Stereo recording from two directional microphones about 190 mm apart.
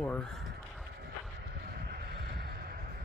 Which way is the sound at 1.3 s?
60° right (ahead or behind).